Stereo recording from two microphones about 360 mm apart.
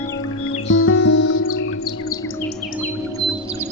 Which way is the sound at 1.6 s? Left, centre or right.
Left.